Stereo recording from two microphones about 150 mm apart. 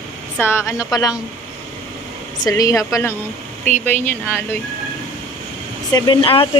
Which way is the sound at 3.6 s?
10° left (ahead or behind).